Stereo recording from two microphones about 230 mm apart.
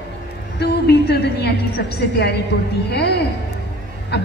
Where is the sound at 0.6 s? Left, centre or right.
Left.